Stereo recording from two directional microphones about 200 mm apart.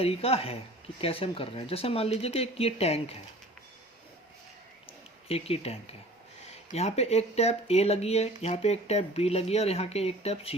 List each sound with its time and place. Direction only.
0.0 s speech: 30° left (ahead or behind)
5.3 s speech: 30° left (ahead or behind)